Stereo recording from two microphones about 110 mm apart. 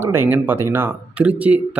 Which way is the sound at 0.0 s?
20° right (ahead or behind).